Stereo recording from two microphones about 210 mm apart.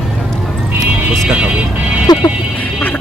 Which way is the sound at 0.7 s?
5° right (ahead or behind).